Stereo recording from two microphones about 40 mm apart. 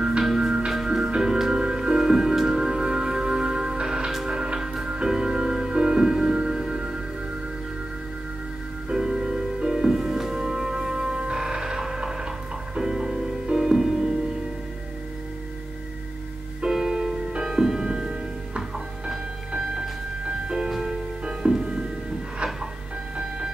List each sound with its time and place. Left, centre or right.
0.7 s music: centre
8.8 s music: centre
16.6 s music: centre
20.4 s music: centre